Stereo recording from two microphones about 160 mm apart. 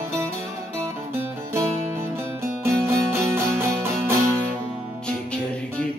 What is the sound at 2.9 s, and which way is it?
Music, 15° right (ahead or behind).